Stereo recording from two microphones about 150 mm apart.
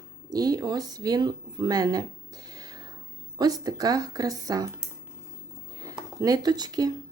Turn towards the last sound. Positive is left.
turn(degrees=-25)  # may be behind; listen again after turning